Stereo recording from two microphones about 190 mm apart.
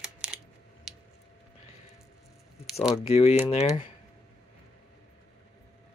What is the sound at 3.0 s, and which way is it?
Speech, 30° left (ahead or behind).